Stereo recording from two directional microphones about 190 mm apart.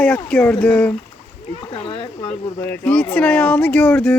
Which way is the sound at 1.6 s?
30° left (ahead or behind).